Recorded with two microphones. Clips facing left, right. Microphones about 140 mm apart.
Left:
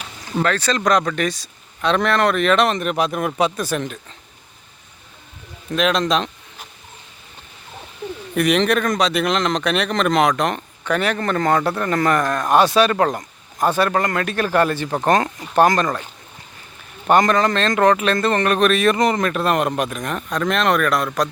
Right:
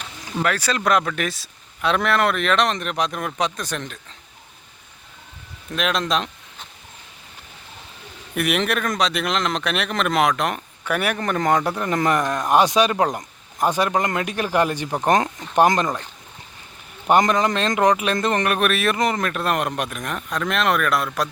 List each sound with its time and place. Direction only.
0.4 s speech: 10° right (ahead or behind)
5.7 s speech: centre (ahead or behind)
8.4 s speech: 5° right (ahead or behind)
17.1 s speech: 15° right (ahead or behind)